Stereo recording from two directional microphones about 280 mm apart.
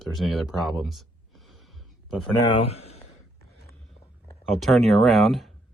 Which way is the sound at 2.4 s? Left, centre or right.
Centre.